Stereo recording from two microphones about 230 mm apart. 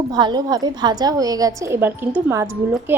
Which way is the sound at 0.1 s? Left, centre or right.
Centre.